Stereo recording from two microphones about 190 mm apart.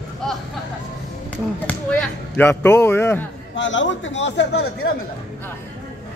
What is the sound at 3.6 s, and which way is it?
Speech, 75° left (ahead or behind).